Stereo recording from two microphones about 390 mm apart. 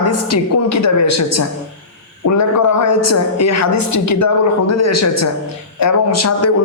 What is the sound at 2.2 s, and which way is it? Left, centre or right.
A woman's voice, left.